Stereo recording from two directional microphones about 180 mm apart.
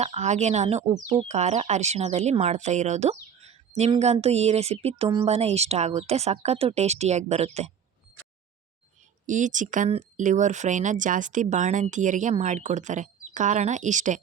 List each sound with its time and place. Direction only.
0.0 s speech: 40° right (ahead or behind)
9.2 s speech: 45° right (ahead or behind)